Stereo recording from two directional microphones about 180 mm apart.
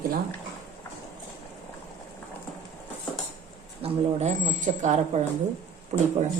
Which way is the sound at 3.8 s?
40° right (ahead or behind).